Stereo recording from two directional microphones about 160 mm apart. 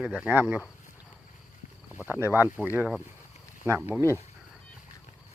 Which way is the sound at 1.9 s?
10° right (ahead or behind).